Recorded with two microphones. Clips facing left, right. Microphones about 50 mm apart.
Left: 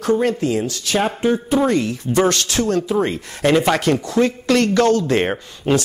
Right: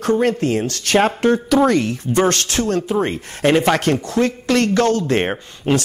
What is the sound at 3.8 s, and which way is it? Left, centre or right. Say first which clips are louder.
Speech: left 1 dB; right.